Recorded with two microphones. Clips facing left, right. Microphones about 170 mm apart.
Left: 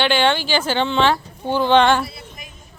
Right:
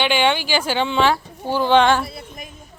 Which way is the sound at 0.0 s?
10° right (ahead or behind).